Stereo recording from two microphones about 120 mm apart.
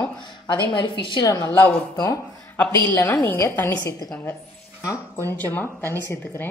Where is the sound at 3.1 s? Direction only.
15° left (ahead or behind).